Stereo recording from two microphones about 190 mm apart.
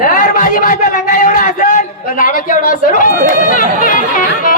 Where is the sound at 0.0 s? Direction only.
45° left (ahead or behind).